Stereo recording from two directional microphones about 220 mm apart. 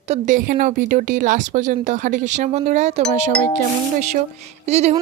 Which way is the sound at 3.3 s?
5° left (ahead or behind).